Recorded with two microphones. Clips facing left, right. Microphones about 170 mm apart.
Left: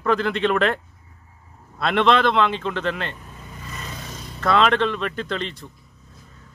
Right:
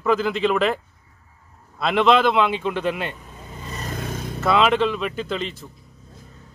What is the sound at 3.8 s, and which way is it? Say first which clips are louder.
Vehicle: right 10 dB; 55° right (ahead or behind).